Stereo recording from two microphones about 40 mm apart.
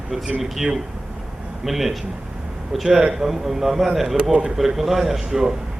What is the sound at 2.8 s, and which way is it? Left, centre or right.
Speech, centre.